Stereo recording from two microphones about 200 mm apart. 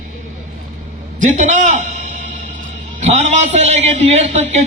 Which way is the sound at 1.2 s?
35° right (ahead or behind).